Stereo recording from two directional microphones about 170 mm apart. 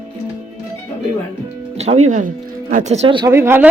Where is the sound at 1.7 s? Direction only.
40° right (ahead or behind).